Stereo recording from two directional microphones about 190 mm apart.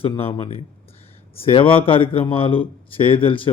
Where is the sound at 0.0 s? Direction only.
30° left (ahead or behind).